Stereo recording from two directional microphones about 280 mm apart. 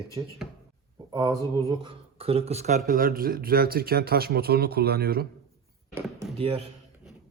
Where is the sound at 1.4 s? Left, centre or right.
Centre.